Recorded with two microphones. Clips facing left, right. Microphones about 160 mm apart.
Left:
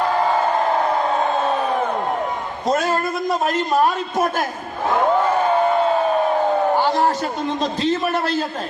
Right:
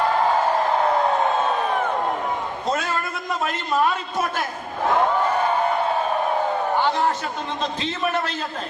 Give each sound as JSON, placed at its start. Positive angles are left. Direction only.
{"t": 2.6, "sound": "a man's voice", "side_deg": 40}
{"t": 6.7, "sound": "a man's voice", "side_deg": 35}